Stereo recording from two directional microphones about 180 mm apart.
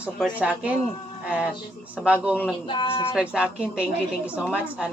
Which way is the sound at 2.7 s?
30° left (ahead or behind).